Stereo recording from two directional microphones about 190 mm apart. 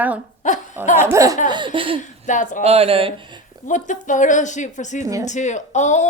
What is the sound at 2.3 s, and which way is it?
Speech, 40° left (ahead or behind).